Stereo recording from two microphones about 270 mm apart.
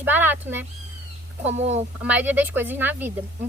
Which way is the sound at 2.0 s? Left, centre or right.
Centre.